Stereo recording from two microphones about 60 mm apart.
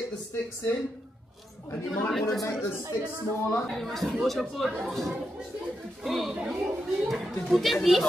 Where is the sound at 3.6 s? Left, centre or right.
Centre.